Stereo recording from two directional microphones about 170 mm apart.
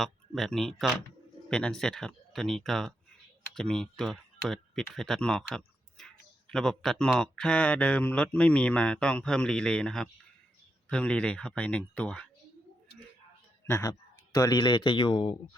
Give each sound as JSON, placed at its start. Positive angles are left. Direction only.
{"t": 0.0, "sound": "speech", "side_deg": 0}
{"t": 13.7, "sound": "speech", "side_deg": 15}